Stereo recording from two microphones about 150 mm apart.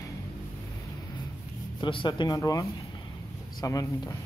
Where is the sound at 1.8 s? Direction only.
30° left (ahead or behind).